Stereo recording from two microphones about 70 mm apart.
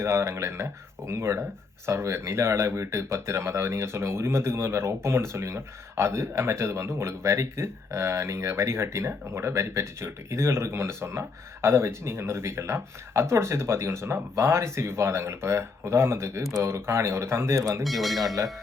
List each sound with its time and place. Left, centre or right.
0.0 s speech: right
17.8 s speech: centre